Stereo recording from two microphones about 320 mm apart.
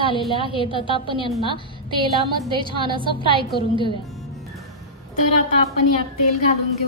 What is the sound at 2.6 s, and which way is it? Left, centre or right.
Speech, centre.